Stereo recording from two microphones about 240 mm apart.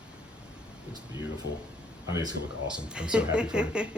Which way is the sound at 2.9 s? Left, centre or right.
Centre.